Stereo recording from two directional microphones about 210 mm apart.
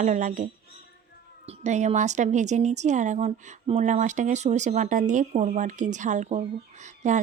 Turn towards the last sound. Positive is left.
turn(degrees=-35)  # may be behind; listen again after turning